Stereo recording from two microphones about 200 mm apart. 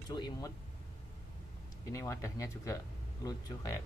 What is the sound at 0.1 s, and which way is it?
Speech, 20° left (ahead or behind).